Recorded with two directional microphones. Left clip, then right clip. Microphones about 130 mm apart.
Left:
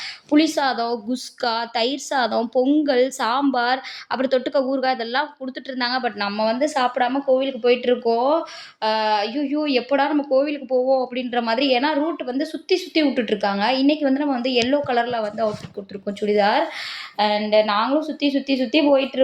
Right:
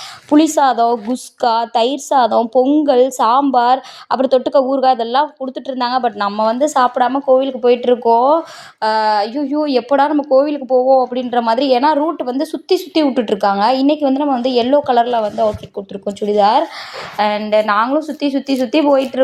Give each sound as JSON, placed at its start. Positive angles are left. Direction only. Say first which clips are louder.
{"t": 0.3, "sound": "a woman's voice", "louder": "right 7 dB", "side_deg": -25}